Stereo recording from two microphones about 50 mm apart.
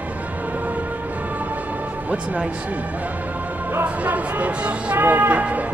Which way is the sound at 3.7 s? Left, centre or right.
Right.